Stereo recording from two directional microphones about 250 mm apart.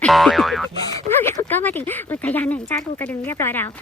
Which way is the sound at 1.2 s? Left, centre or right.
Centre.